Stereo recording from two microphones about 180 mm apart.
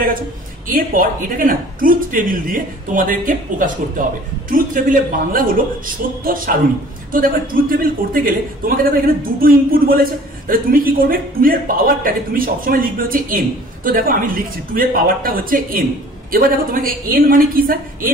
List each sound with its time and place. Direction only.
0.7 s a man's voice: 50° right (ahead or behind)